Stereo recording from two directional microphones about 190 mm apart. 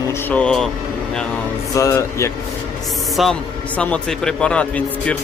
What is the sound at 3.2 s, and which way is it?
Speech, centre (ahead or behind).